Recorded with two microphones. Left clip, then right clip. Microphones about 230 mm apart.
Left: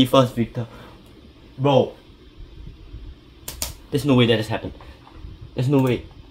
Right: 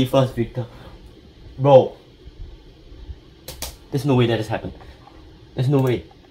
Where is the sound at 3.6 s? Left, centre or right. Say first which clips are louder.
Left 3 dB; left.